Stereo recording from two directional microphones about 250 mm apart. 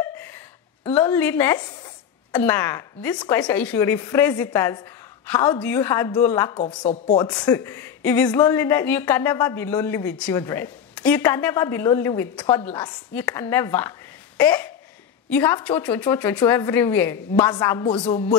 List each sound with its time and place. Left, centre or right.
0.9 s a woman's voice: centre; by 18.3 s left